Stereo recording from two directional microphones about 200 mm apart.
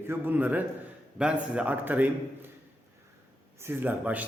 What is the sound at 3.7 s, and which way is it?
Speech, 10° right (ahead or behind).